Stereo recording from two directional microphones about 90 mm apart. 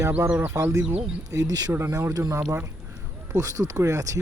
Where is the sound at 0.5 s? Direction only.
35° right (ahead or behind).